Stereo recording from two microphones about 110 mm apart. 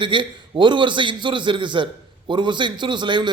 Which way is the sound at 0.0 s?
45° right (ahead or behind).